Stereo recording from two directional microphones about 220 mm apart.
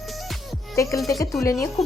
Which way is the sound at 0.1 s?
Centre (ahead or behind).